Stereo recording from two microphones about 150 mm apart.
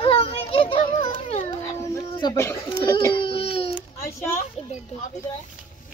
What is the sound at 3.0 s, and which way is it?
Baby cry, 30° left (ahead or behind).